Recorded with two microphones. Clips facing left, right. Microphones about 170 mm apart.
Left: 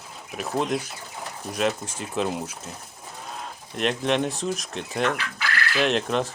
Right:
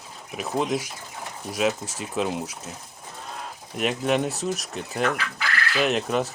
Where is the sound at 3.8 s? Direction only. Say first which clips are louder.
Even; 5° right (ahead or behind).